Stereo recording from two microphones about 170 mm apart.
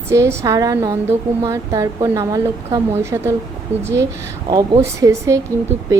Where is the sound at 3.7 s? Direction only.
40° right (ahead or behind).